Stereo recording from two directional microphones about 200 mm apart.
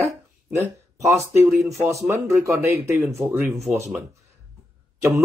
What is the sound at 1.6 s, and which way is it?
Speech, 15° right (ahead or behind).